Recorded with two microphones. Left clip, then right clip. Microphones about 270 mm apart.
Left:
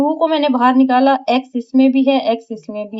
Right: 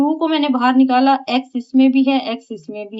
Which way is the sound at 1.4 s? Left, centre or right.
Centre.